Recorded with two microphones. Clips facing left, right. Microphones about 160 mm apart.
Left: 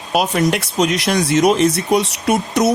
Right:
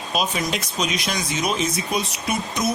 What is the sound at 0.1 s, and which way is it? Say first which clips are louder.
Speech: left 8 dB; 65° left (ahead or behind).